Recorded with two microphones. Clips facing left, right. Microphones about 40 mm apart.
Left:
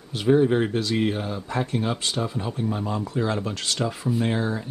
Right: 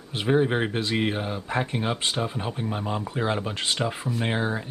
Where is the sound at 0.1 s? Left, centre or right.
Right.